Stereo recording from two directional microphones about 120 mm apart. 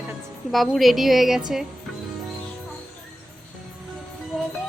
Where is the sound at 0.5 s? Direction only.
Centre (ahead or behind).